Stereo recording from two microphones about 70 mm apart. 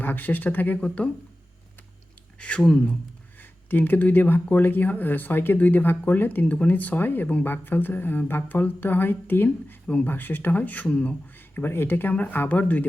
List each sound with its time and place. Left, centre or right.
0.0 s speech: left
2.4 s speech: centre
3.7 s speech: left
9.8 s speech: centre
10.1 s speech: left
11.3 s speech: left